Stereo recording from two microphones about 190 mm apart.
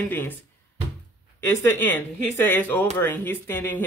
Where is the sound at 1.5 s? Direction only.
10° left (ahead or behind).